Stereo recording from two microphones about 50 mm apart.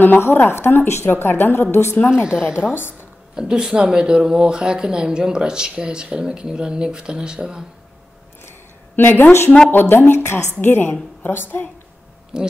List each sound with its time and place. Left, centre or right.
0.2 s a woman's voice: left
2.0 s speech: centre
2.7 s a woman's voice: left
3.3 s speech: centre
8.9 s a woman's voice: left
12.3 s speech: centre